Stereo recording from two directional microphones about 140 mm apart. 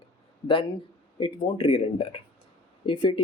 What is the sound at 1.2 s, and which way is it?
Speech, 40° left (ahead or behind).